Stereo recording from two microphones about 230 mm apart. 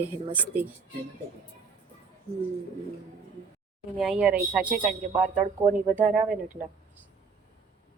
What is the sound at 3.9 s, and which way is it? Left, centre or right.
Speech, centre.